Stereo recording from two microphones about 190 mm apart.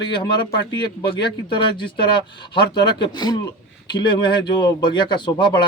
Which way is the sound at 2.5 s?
25° left (ahead or behind).